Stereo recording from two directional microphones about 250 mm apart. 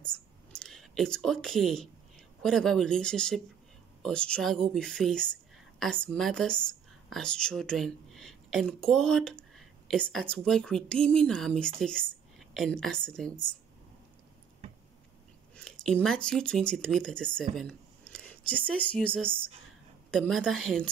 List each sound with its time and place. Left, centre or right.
0.0 s a woman's voice: centre
15.5 s a woman's voice: centre